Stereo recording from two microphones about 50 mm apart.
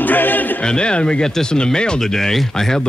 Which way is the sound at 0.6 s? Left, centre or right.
Centre.